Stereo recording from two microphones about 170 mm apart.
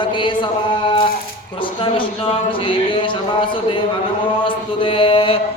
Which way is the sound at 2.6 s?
30° left (ahead or behind).